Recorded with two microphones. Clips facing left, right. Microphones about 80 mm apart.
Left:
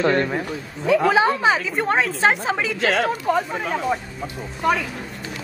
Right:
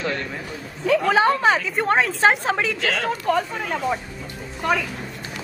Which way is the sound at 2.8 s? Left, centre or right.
Left.